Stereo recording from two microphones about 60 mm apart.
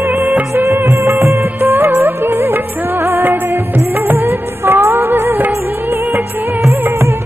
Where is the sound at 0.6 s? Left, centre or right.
Right.